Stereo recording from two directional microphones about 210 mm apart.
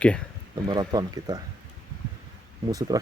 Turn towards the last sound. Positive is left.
turn(degrees=-15)  # may be behind; listen again after turning